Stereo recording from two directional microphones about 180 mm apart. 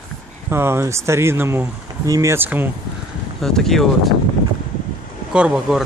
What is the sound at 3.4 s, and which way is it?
Speech, centre (ahead or behind).